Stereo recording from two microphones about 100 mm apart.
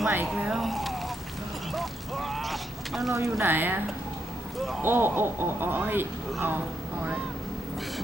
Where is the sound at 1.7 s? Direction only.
Centre (ahead or behind).